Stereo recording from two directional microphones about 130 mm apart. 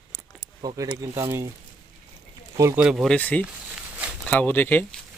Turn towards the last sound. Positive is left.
turn(degrees=15)  # may be behind; listen again after turning